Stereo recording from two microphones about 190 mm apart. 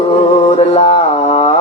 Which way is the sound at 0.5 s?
35° left (ahead or behind).